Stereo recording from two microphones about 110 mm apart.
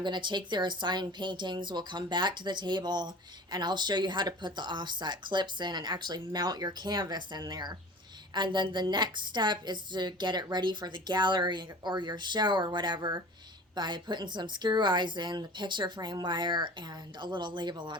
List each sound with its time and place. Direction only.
0.0 s a woman's voice: 45° right (ahead or behind)